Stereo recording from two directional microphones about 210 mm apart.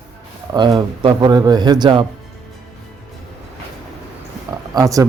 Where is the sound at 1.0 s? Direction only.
20° right (ahead or behind).